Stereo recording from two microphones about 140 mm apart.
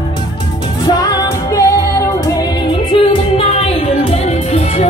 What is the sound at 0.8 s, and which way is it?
Music, 25° left (ahead or behind).